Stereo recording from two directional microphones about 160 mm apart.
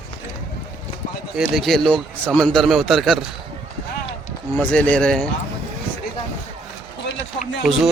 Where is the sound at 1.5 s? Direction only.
Centre (ahead or behind).